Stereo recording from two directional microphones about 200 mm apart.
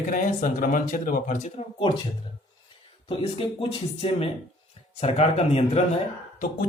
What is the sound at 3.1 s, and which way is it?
Speech, 25° left (ahead or behind).